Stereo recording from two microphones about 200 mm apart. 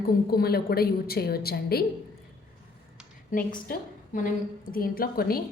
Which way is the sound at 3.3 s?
45° left (ahead or behind).